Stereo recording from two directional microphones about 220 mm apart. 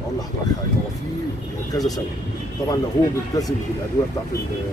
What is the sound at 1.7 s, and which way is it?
Speech, 15° left (ahead or behind).